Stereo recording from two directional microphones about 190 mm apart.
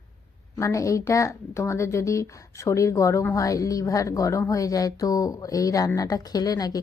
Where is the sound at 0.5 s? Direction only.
15° left (ahead or behind).